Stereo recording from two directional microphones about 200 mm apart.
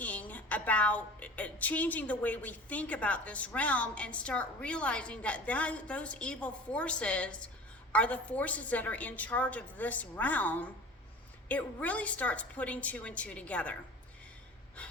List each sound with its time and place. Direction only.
0.0 s a woman's voice: 10° left (ahead or behind)